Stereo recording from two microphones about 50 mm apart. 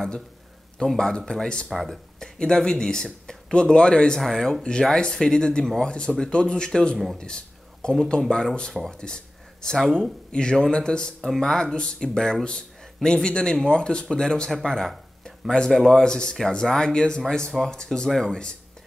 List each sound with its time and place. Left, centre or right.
0.8 s speech: centre
2.1 s speech: centre
8.9 s a sound: centre
10.3 s speech: centre
11.1 s speech: centre
11.4 s speech: centre
16.0 s speech: centre